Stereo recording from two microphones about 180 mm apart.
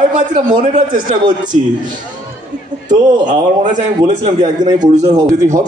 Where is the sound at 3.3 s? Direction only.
45° right (ahead or behind).